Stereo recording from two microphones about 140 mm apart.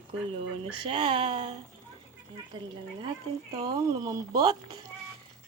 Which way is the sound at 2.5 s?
30° right (ahead or behind).